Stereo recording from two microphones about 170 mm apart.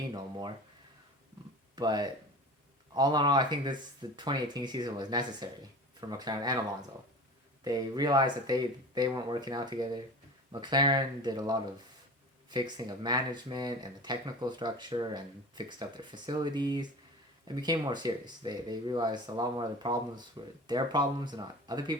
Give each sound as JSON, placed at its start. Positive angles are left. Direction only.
{"t": 0.1, "sound": "speech", "side_deg": -25}
{"t": 1.7, "sound": "speech", "side_deg": -25}
{"t": 7.6, "sound": "speech", "side_deg": -20}